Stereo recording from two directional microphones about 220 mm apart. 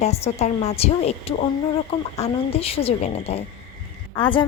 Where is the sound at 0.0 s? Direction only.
30° left (ahead or behind).